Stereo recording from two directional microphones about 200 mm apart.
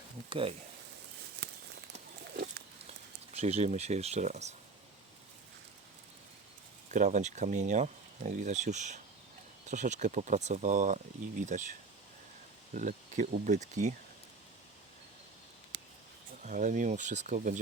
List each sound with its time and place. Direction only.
0.3 s speech: 25° right (ahead or behind)
2.3 s pig: 50° right (ahead or behind)
3.3 s speech: 30° right (ahead or behind)
6.9 s speech: 35° right (ahead or behind)
12.7 s speech: 40° right (ahead or behind)
15.7 s a sound: 60° right (ahead or behind)
16.5 s speech: 40° right (ahead or behind)